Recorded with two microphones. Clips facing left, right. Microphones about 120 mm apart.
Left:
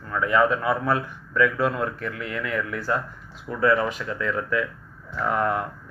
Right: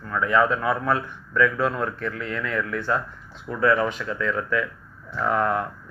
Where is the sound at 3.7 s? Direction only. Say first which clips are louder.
Even; 5° left (ahead or behind).